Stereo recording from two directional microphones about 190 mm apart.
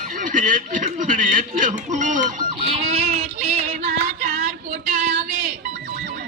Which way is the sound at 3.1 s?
35° right (ahead or behind).